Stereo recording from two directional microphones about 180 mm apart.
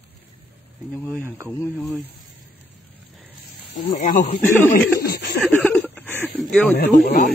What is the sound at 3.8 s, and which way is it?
Speech, 40° left (ahead or behind).